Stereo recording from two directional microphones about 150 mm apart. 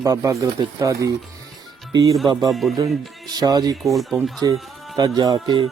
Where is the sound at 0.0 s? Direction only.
20° right (ahead or behind).